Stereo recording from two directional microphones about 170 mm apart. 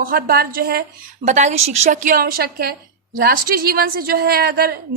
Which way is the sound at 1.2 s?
45° right (ahead or behind).